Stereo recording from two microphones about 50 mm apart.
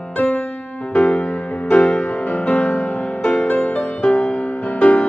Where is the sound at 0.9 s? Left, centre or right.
Left.